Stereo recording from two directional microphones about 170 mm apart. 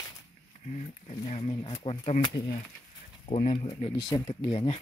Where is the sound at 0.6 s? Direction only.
45° left (ahead or behind).